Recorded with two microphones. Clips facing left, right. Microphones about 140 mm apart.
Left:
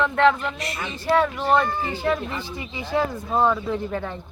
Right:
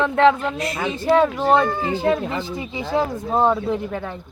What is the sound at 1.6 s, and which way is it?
Speech, 70° right (ahead or behind).